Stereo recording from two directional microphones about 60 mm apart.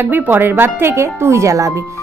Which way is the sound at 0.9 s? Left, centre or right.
Right.